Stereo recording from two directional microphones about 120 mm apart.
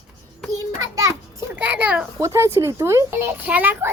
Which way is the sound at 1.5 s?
15° right (ahead or behind).